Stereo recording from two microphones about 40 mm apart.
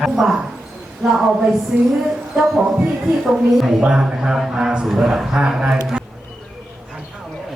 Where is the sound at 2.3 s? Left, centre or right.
Centre.